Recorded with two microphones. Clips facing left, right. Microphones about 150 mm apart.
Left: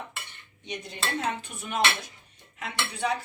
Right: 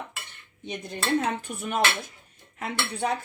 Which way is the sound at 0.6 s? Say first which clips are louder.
Right 3 dB; 50° right (ahead or behind).